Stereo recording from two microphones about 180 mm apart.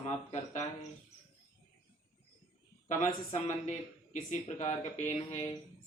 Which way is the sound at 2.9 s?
45° left (ahead or behind).